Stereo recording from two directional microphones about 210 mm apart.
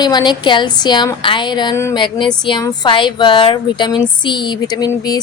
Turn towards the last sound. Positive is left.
turn(degrees=20)  # may be behind; listen again after turning